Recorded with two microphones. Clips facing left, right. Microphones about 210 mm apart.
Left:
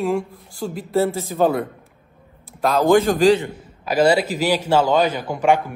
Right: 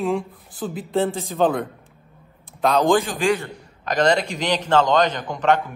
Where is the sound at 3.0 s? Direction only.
40° left (ahead or behind).